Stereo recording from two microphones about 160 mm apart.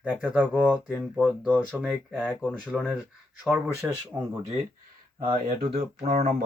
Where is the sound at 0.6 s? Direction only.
5° left (ahead or behind).